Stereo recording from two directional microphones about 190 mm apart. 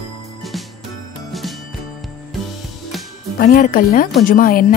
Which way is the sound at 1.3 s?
Centre (ahead or behind).